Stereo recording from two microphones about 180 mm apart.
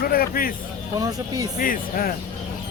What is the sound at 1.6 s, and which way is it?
Speech, 50° left (ahead or behind).